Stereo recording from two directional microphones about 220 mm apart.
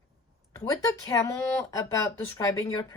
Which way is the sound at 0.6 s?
15° left (ahead or behind).